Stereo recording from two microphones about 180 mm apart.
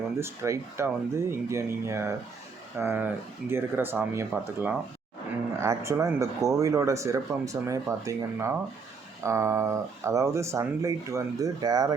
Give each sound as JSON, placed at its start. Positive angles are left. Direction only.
{"t": 0.2, "sound": "speech", "side_deg": -15}